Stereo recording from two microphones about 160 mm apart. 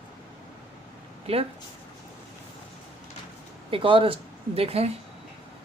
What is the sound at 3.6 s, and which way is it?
Speech, 35° right (ahead or behind).